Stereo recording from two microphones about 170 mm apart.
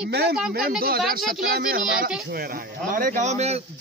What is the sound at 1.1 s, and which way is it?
A man's voice, 60° right (ahead or behind).